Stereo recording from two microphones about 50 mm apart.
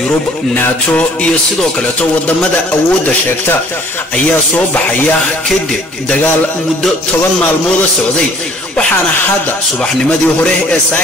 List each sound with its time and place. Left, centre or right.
10.0 s a man's voice: centre